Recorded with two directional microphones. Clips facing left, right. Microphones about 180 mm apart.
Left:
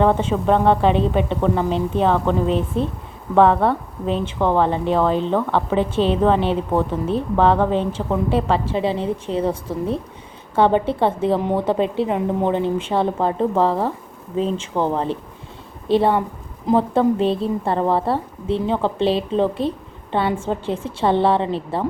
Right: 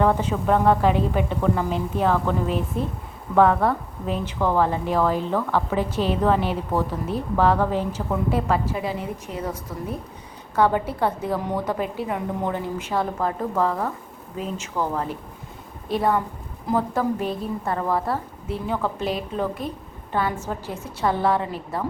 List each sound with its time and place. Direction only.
0.0 s a woman's voice: 25° left (ahead or behind)